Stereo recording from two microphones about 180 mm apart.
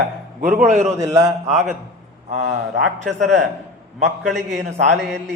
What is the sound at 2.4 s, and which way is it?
Speech, 70° right (ahead or behind).